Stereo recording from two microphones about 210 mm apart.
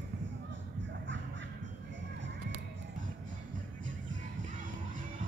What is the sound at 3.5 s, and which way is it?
Music, 40° right (ahead or behind).